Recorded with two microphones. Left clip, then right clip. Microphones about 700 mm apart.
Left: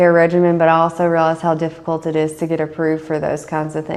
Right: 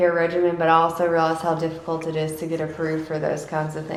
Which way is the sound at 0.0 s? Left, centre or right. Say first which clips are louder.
Left 7 dB; left.